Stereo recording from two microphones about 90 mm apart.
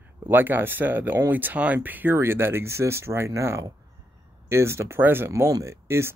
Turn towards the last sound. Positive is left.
turn(degrees=-30)  # may be behind; listen again after turning